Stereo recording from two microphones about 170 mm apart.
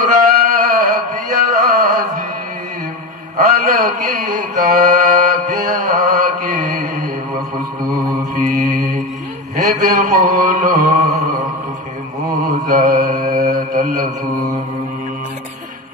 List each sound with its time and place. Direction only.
0.0 s a sound: 55° right (ahead or behind)
3.3 s mantra: 55° right (ahead or behind)
8.4 s mantra: 50° right (ahead or behind)
12.6 s mantra: 50° right (ahead or behind)